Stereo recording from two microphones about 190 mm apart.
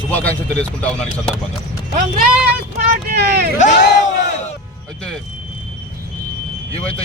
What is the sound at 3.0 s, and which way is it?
Speech, 55° right (ahead or behind).